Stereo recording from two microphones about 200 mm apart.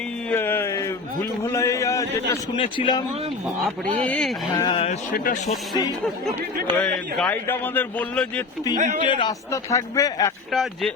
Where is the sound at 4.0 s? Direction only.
5° left (ahead or behind).